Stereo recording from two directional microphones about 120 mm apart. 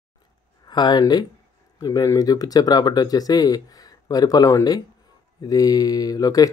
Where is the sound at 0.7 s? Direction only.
35° left (ahead or behind).